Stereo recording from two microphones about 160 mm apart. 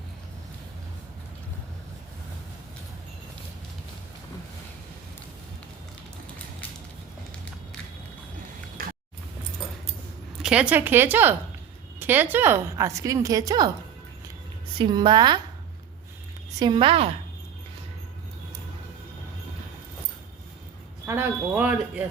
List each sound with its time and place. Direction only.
8.8 s a sound: 60° right (ahead or behind)
10.4 s a woman's voice: 5° right (ahead or behind); by 13.7 s 25° right (ahead or behind)
14.8 s a woman's voice: 30° right (ahead or behind)
16.6 s a woman's voice: 30° right (ahead or behind)
21.1 s speech: 10° right (ahead or behind)